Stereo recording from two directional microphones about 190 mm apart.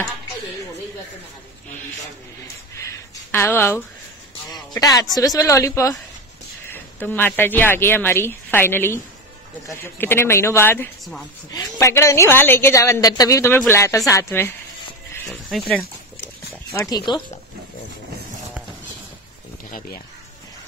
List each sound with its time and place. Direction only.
3.3 s a woman's voice: 10° left (ahead or behind)
4.5 s music: 20° left (ahead or behind)
5.1 s a woman's voice: 20° left (ahead or behind)
15.2 s speech: centre (ahead or behind)
16.9 s speech: 25° left (ahead or behind)